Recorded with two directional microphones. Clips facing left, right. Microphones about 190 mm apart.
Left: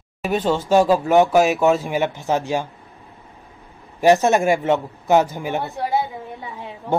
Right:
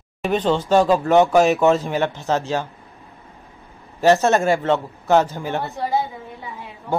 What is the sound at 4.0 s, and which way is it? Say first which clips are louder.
A man's voice: left 1 dB; 15° left (ahead or behind).